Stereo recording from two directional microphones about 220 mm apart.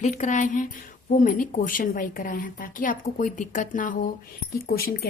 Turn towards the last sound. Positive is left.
turn(degrees=45)  # may be behind; listen again after turning